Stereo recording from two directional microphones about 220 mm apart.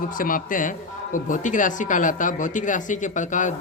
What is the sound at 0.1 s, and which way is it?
A man's voice, 40° left (ahead or behind).